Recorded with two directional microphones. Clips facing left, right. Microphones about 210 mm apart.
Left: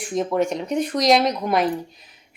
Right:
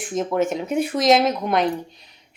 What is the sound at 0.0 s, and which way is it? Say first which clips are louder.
A woman's voice: even; centre (ahead or behind).